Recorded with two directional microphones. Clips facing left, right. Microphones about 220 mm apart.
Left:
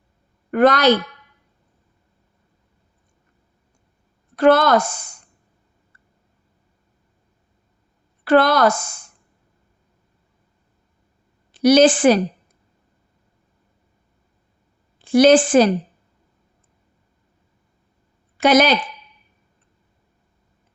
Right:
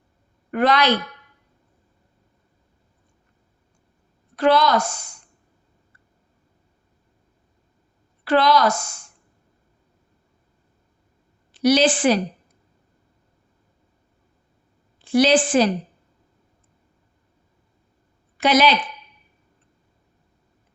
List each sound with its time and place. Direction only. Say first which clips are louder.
0.5 s a woman's voice: left 5 dB; 45° left (ahead or behind)
4.4 s a woman's voice: left 4 dB; 50° left (ahead or behind)
8.2 s a woman's voice: left 3 dB; 50° left (ahead or behind)
11.6 s a woman's voice: left 5 dB; 45° left (ahead or behind)
15.2 s a woman's voice: left 5 dB; 50° left (ahead or behind)
18.4 s a woman's voice: left 3 dB; 45° left (ahead or behind)